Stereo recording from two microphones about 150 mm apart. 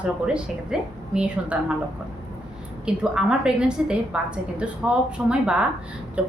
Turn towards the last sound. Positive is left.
turn(degrees=-10)  # may be behind; listen again after turning